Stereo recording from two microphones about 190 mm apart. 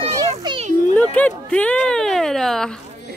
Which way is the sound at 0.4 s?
25° right (ahead or behind).